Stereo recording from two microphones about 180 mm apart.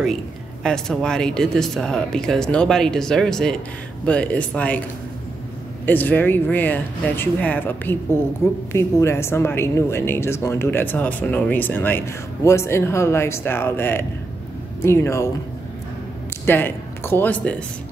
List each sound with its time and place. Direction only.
0.7 s a woman's voice: 5° left (ahead or behind)
5.9 s a woman's voice: 10° left (ahead or behind)
16.4 s speech: 10° left (ahead or behind)